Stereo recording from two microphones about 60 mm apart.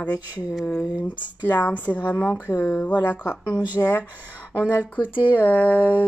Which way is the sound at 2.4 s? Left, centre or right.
Left.